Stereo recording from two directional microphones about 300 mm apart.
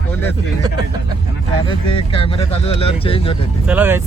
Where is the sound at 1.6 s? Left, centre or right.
Centre.